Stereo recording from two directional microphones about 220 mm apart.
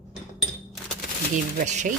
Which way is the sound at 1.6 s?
35° right (ahead or behind).